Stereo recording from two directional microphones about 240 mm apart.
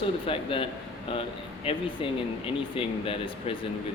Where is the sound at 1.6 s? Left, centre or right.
Left.